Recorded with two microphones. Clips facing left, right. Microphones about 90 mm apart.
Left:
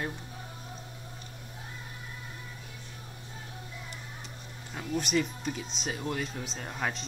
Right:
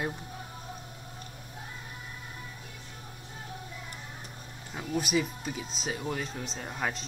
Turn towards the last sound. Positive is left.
turn(degrees=0)  # may be behind; listen again after turning